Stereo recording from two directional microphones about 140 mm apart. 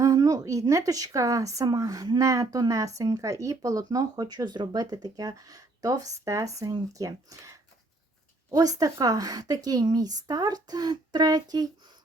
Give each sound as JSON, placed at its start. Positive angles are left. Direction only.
{"t": 0.0, "sound": "speech", "side_deg": -25}